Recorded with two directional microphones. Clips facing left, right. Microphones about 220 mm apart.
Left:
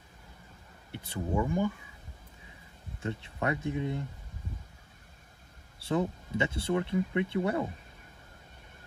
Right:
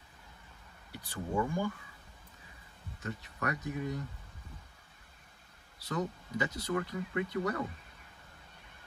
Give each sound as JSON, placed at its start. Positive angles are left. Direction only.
{"t": 0.9, "sound": "speech", "side_deg": 20}
{"t": 3.0, "sound": "speech", "side_deg": 25}
{"t": 5.8, "sound": "speech", "side_deg": 30}